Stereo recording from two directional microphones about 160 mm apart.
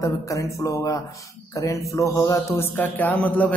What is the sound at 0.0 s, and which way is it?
A man's voice, 20° left (ahead or behind).